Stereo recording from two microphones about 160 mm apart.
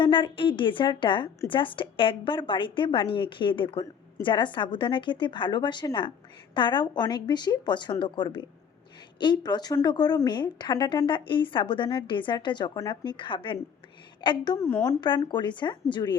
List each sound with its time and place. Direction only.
0.0 s a woman's voice: 30° left (ahead or behind)
14.6 s a woman's voice: 15° left (ahead or behind)
15.0 s speech: 30° left (ahead or behind)